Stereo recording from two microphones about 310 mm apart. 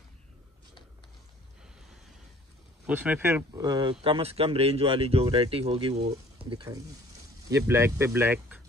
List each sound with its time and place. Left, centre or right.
2.9 s speech: centre